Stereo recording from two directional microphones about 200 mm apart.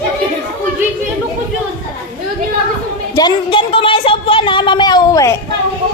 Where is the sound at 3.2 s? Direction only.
25° left (ahead or behind).